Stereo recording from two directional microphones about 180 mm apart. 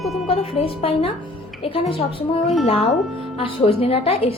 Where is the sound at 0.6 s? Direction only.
35° left (ahead or behind).